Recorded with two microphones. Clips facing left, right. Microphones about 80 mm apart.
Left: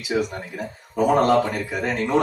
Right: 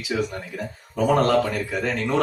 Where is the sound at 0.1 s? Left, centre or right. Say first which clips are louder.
Left 2 dB; centre.